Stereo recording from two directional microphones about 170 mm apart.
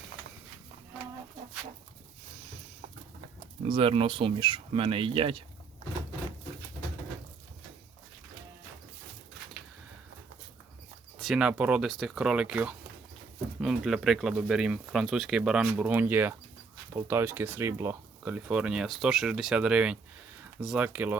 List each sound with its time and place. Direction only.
3.7 s speech: 30° right (ahead or behind)
11.2 s speech: centre (ahead or behind)